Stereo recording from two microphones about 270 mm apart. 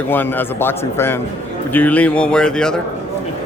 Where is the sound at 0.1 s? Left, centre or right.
Centre.